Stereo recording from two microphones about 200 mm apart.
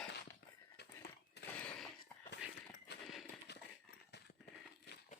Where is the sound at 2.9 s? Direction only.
55° left (ahead or behind).